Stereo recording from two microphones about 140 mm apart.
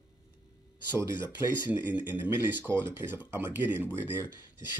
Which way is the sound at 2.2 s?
15° right (ahead or behind).